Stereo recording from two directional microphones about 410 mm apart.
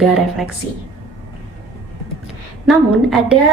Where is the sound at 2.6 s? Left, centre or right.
Centre.